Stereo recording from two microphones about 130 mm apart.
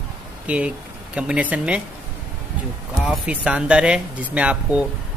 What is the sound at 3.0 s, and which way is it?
A man's voice, 5° right (ahead or behind).